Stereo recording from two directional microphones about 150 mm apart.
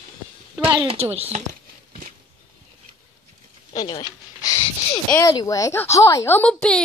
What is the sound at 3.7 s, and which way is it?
Speech, 25° left (ahead or behind).